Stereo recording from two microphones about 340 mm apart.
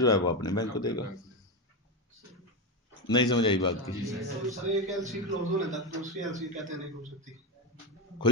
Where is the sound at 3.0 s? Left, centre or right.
Centre.